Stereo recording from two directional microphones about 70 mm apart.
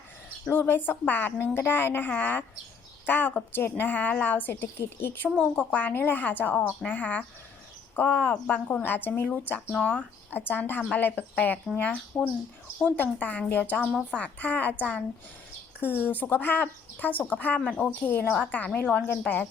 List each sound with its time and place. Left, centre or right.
0.4 s a woman's voice: left
5.3 s speech: centre
5.7 s a woman's voice: left
17.6 s speech: centre
18.0 s a woman's voice: left